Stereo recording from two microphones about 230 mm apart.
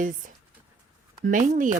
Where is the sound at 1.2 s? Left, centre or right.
Right.